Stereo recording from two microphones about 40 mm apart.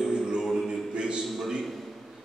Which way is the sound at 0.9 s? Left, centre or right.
Right.